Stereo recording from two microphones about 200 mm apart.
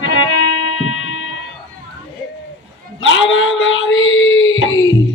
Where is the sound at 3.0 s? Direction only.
70° left (ahead or behind).